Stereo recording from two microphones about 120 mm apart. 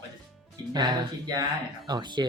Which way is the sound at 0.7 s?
40° right (ahead or behind).